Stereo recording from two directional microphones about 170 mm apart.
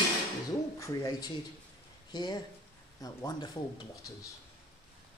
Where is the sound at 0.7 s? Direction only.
20° left (ahead or behind).